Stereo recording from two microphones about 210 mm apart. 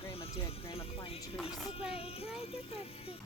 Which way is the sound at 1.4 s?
5° right (ahead or behind).